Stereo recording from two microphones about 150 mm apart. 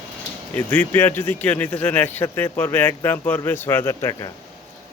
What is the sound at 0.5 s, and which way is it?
Speech, 10° left (ahead or behind).